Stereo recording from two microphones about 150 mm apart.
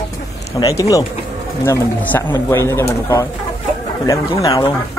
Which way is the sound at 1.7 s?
15° left (ahead or behind).